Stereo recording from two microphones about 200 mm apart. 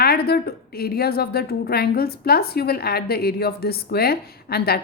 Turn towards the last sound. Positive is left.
turn(degrees=50)  # may be behind; listen again after turning